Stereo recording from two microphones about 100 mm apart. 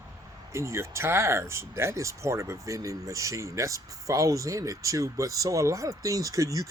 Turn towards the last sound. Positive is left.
turn(degrees=-35)  # may be behind; listen again after turning